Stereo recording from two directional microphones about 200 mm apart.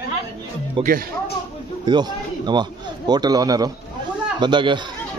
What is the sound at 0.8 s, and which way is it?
A man's voice, 25° right (ahead or behind).